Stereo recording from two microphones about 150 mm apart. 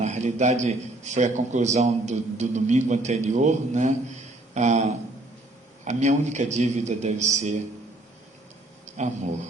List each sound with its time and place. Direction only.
0.0 s a man's voice: 50° right (ahead or behind)
9.0 s a man's voice: 50° right (ahead or behind)